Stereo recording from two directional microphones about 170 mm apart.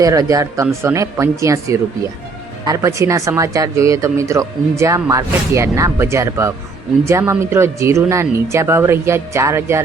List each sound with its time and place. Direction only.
0.0 s speech: 20° right (ahead or behind)